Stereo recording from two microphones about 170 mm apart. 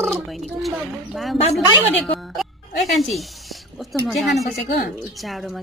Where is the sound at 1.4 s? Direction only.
35° left (ahead or behind).